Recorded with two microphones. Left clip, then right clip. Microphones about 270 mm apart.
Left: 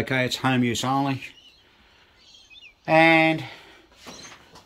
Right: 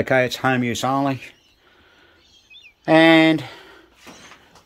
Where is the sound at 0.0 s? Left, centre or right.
Centre.